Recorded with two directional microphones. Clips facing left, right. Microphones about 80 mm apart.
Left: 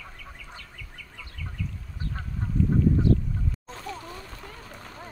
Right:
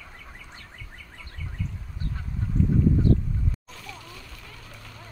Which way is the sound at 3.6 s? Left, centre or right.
Left.